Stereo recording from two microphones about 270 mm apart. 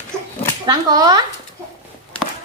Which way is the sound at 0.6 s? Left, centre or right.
Centre.